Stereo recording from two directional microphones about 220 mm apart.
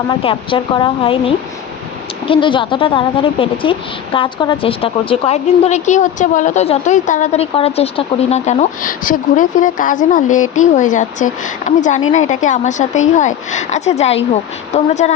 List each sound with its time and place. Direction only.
0.1 s a woman's voice: 25° left (ahead or behind)
2.2 s a woman's voice: 25° left (ahead or behind)